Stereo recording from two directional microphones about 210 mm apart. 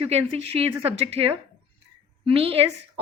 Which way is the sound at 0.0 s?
30° right (ahead or behind).